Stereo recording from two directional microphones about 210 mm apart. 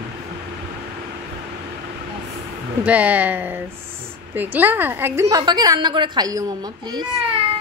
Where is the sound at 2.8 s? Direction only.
5° right (ahead or behind).